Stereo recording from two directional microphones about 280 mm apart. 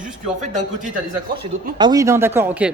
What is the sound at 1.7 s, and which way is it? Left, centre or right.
Speech, centre.